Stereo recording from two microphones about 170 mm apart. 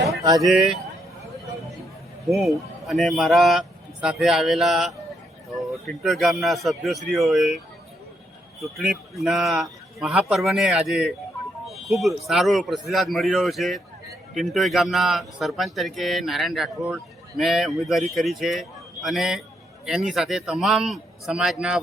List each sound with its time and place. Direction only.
0.4 s speech: centre (ahead or behind)
2.3 s speech: centre (ahead or behind)
8.6 s speech: centre (ahead or behind)